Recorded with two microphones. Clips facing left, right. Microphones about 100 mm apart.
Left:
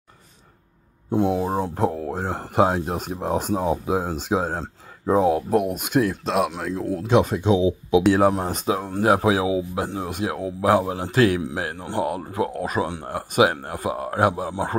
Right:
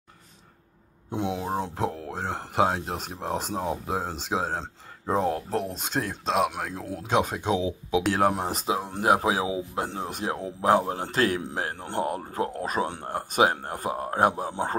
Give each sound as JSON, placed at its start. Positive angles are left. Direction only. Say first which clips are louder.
{"t": 1.1, "sound": "speech", "louder": "left 7 dB", "side_deg": 0}
{"t": 8.5, "sound": "speech", "louder": "left 5 dB", "side_deg": -20}